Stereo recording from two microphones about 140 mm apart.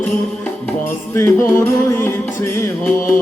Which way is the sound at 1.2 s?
20° left (ahead or behind).